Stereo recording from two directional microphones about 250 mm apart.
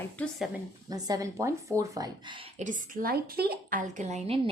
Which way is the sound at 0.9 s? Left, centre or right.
Centre.